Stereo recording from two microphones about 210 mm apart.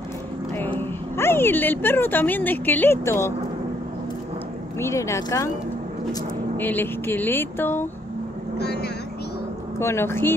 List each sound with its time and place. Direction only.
0.7 s speech: 10° left (ahead or behind)
4.7 s speech: 15° left (ahead or behind)
6.5 s speech: 10° left (ahead or behind)
8.5 s speech: 50° left (ahead or behind)
9.8 s speech: 10° left (ahead or behind)